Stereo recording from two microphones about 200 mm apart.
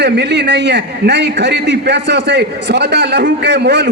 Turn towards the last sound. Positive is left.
turn(degrees=-55)  # may be behind; listen again after turning